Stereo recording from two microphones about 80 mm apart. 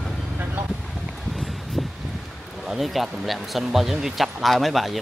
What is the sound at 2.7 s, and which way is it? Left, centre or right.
Speech, centre.